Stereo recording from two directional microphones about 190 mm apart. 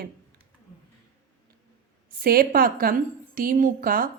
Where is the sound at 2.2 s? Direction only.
50° right (ahead or behind).